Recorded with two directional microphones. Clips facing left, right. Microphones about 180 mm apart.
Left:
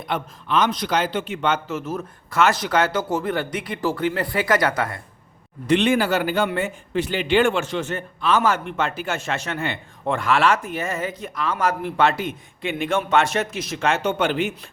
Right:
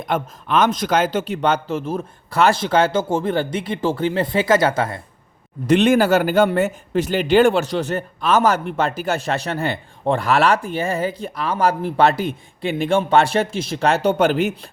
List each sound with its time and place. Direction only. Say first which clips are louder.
0.0 s a man's voice: right 4 dB; 50° right (ahead or behind); by 4.9 s 25° right (ahead or behind)
5.6 s a man's voice: right 4 dB; 45° right (ahead or behind)